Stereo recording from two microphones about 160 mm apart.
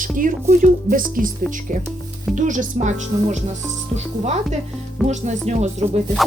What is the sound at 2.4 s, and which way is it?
Speech, 50° right (ahead or behind).